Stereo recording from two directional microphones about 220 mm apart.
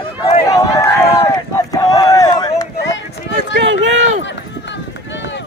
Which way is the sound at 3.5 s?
55° right (ahead or behind).